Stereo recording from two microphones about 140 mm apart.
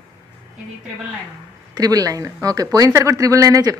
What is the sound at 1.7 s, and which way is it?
Speech, 25° right (ahead or behind).